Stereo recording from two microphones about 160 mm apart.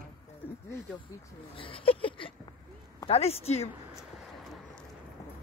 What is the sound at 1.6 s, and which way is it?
Speech, 35° left (ahead or behind).